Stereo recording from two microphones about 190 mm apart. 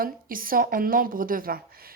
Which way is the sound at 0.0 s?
50° right (ahead or behind).